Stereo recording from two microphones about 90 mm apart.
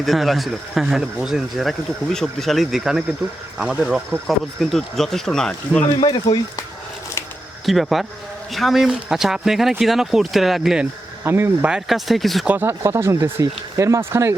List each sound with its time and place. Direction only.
0.0 s speech: centre (ahead or behind)
6.0 s speech: 50° left (ahead or behind)
7.6 s speech: centre (ahead or behind)
11.2 s speech: 25° right (ahead or behind)
11.9 s speech: centre (ahead or behind)
12.5 s speech: 20° right (ahead or behind)
12.8 s speech: 30° right (ahead or behind)